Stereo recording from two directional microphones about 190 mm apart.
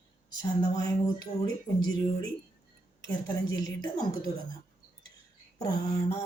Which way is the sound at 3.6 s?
20° left (ahead or behind).